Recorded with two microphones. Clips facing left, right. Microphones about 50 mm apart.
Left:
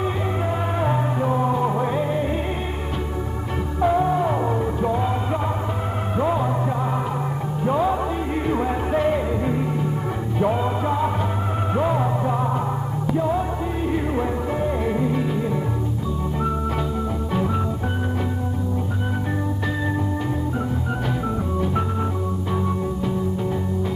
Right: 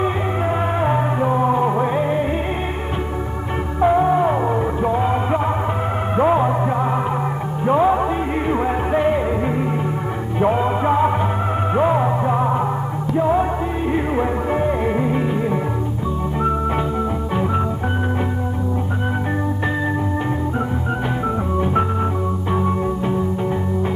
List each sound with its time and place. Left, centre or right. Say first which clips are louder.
0.7 s music: right 4 dB; right
3.8 s music: right 4 dB; right
7.6 s music: right 5 dB; right